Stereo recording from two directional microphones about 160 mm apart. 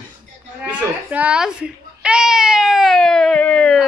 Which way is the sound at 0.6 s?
10° right (ahead or behind).